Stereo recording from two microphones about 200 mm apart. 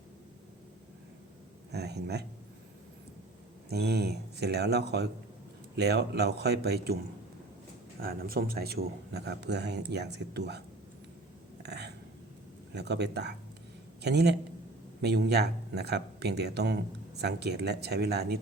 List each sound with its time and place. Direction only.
1.7 s speech: 55° right (ahead or behind)
3.7 s speech: 55° right (ahead or behind)
8.0 s speech: 50° right (ahead or behind)
11.6 s a sound: 55° right (ahead or behind)
12.7 s speech: 55° right (ahead or behind)